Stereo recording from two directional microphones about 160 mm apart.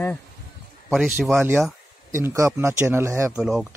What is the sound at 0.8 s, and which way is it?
A man's voice, 5° right (ahead or behind).